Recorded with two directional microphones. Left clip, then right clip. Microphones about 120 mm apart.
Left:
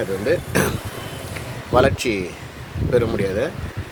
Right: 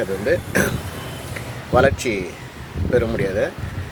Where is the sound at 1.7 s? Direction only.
25° left (ahead or behind).